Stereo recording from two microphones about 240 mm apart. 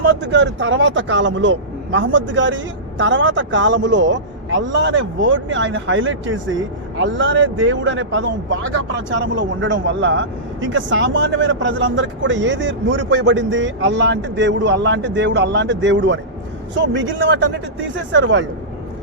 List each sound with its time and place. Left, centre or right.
0.0 s speech: right